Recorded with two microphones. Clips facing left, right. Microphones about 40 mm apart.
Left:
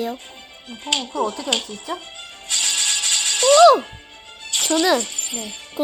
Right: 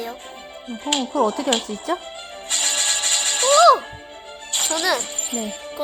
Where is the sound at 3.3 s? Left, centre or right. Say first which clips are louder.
Left 2 dB; left.